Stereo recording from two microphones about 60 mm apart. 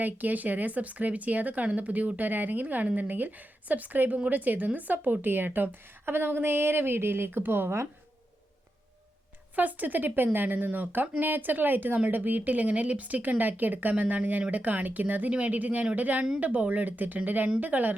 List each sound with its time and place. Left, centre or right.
0.0 s a woman's voice: right
9.6 s a woman's voice: right